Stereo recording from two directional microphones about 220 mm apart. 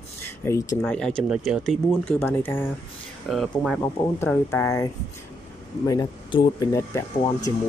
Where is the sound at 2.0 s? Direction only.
10° left (ahead or behind).